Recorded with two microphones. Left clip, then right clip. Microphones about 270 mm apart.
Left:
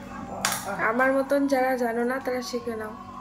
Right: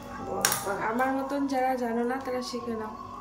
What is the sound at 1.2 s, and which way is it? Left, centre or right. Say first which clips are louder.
Speech: left 5 dB; centre.